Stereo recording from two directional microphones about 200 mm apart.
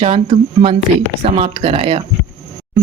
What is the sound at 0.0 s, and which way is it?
Speech, 30° right (ahead or behind).